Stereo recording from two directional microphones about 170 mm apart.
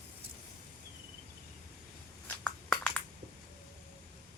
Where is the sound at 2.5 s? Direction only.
5° left (ahead or behind).